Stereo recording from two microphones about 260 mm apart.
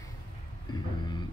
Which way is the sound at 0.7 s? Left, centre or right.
Centre.